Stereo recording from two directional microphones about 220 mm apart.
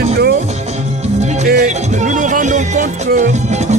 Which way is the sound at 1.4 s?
35° right (ahead or behind).